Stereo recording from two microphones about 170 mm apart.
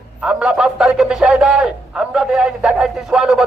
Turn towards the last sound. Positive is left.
turn(degrees=-5)  # may be behind; listen again after turning